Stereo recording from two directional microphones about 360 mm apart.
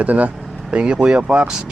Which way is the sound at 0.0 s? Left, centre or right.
Centre.